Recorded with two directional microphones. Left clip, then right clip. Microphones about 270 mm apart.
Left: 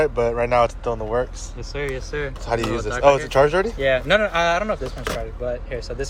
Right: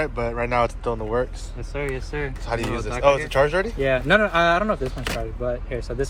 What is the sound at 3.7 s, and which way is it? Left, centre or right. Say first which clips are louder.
Speech: left 1 dB; centre.